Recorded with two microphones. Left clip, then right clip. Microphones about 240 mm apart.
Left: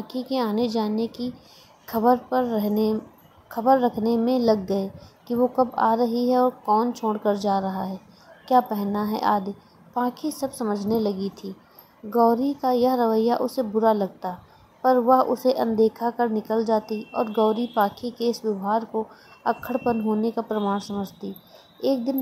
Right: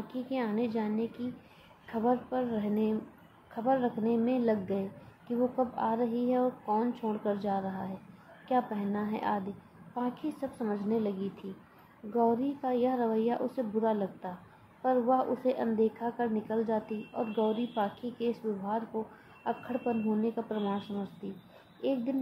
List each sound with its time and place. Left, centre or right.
0.1 s a woman's voice: left
19.4 s a woman's voice: left
21.8 s a woman's voice: left